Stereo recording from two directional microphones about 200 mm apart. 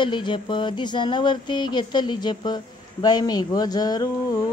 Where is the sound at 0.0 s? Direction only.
25° left (ahead or behind).